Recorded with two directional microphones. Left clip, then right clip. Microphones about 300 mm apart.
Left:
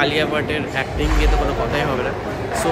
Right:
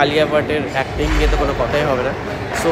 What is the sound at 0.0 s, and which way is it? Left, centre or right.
Speech, centre.